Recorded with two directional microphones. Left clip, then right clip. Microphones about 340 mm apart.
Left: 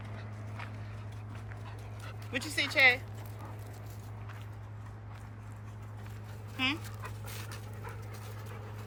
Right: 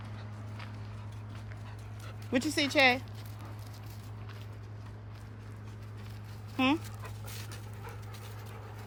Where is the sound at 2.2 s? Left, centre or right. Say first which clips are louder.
Right 3 dB; centre.